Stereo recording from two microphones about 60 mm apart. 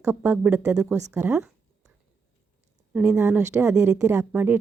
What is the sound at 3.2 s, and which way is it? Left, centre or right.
Speech, right.